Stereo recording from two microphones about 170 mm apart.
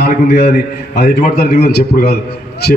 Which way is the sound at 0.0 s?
70° left (ahead or behind).